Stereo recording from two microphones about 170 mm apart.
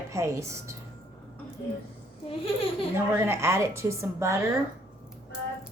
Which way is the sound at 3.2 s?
15° right (ahead or behind).